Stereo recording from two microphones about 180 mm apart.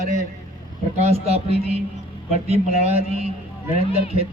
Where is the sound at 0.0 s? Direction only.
40° right (ahead or behind).